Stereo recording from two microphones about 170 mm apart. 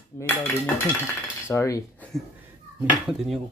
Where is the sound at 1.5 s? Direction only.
20° left (ahead or behind).